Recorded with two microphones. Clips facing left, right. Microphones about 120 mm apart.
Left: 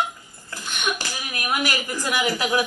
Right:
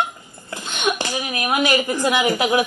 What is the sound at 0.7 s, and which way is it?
Speech, 65° right (ahead or behind).